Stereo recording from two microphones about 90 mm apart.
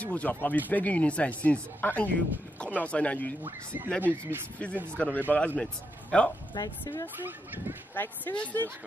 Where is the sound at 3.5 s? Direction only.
25° right (ahead or behind).